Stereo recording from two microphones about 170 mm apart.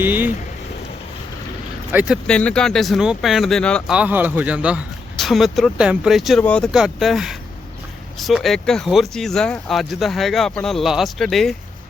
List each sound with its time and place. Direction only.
0.0 s speech: 10° right (ahead or behind)
1.9 s speech: 10° right (ahead or behind)
2.2 s speech: 5° left (ahead or behind)
3.9 s speech: 10° right (ahead or behind); by 6.7 s 5° left (ahead or behind)
6.7 s speech: 5° right (ahead or behind)